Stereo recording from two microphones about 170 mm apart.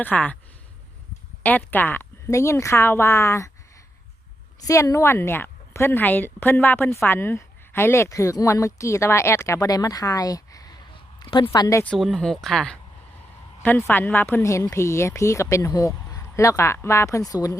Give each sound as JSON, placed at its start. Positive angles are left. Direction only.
{"t": 0.0, "sound": "a woman's voice", "side_deg": 10}
{"t": 1.4, "sound": "a woman's voice", "side_deg": 10}
{"t": 4.6, "sound": "a woman's voice", "side_deg": 20}
{"t": 11.9, "sound": "a woman's voice", "side_deg": 5}